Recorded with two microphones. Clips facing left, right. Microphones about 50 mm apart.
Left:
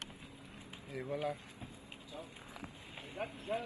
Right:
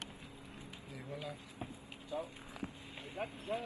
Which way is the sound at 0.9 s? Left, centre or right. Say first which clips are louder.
Left 8 dB; left.